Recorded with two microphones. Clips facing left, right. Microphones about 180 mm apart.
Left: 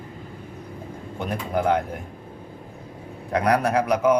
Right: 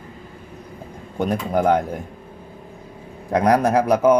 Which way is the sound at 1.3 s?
45° right (ahead or behind).